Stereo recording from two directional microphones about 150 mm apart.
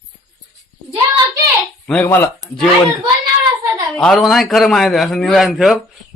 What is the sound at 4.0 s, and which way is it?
A man's voice, centre (ahead or behind).